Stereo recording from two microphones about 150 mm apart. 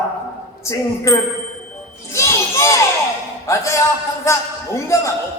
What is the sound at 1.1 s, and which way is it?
Speech, 20° left (ahead or behind).